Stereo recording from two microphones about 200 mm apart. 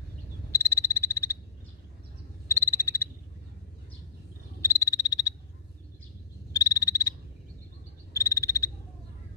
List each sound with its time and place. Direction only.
0.5 s frog: 15° left (ahead or behind)
2.4 s frog: 15° left (ahead or behind)
4.6 s frog: 15° left (ahead or behind)
6.5 s frog: 15° left (ahead or behind)